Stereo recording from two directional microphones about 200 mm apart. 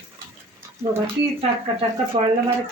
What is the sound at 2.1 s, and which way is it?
Speech, 30° right (ahead or behind).